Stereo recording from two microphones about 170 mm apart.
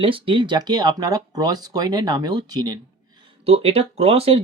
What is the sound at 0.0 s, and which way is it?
Speech, 30° right (ahead or behind).